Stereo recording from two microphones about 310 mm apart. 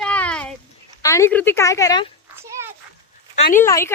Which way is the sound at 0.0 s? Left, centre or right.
Centre.